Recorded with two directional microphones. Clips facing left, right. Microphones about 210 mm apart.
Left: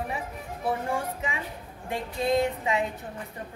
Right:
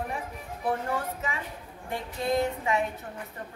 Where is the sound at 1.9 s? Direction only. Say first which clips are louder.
Left 3 dB; 20° left (ahead or behind).